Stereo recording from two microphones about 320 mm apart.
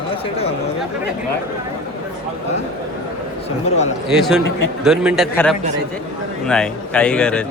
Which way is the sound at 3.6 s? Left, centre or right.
Centre.